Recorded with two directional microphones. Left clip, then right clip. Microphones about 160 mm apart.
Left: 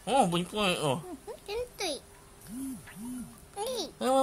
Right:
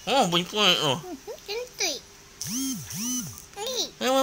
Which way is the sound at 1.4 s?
15° left (ahead or behind).